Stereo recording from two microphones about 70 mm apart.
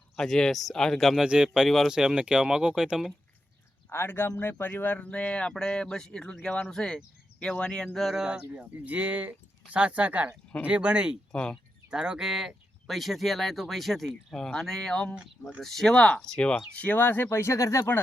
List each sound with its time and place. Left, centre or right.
0.2 s speech: centre
1.2 s speech: centre
3.9 s speech: left; by 8.2 s centre
8.2 s speech: centre
11.3 s speech: centre
11.9 s speech: centre; by 17.2 s left
17.2 s speech: left